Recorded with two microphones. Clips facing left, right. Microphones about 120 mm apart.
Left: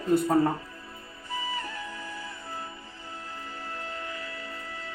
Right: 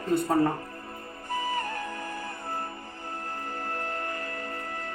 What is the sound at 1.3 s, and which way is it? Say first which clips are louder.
Music: right 4 dB; 50° right (ahead or behind).